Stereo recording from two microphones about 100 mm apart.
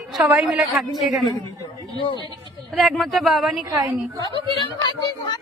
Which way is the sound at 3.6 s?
40° right (ahead or behind).